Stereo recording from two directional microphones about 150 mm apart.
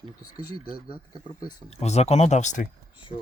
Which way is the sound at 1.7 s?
45° left (ahead or behind).